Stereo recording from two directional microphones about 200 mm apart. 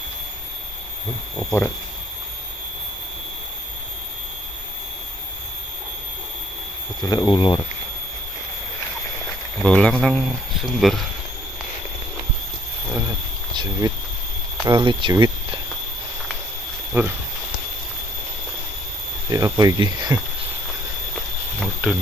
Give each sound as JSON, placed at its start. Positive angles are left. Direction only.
{"t": 7.0, "sound": "speech", "side_deg": 20}
{"t": 9.6, "sound": "speech", "side_deg": 5}
{"t": 13.5, "sound": "speech", "side_deg": -20}
{"t": 16.9, "sound": "speech", "side_deg": -10}
{"t": 19.3, "sound": "speech", "side_deg": -20}
{"t": 21.1, "sound": "a sound", "side_deg": 0}